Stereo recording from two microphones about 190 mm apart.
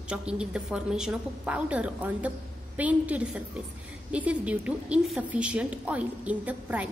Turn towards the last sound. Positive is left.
turn(degrees=-10)  # may be behind; listen again after turning